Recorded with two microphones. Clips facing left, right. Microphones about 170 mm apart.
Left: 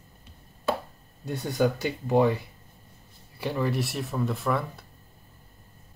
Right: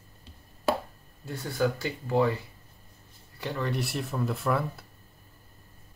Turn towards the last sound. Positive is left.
turn(degrees=0)  # may be behind; listen again after turning